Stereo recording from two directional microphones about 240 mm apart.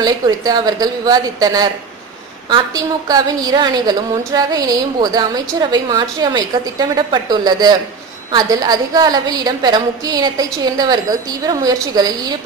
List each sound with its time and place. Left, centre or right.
0.0 s a woman's voice: centre